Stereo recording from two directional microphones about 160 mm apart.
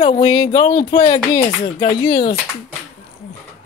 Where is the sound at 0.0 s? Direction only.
25° left (ahead or behind).